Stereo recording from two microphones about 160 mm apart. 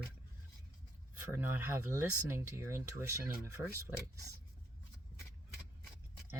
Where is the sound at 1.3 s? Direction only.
15° right (ahead or behind).